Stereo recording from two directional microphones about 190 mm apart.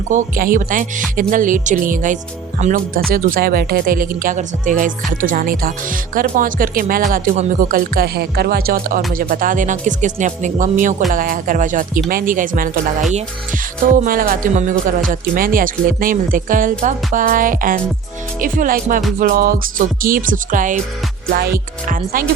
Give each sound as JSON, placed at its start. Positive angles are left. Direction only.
{"t": 0.1, "sound": "speech", "side_deg": -45}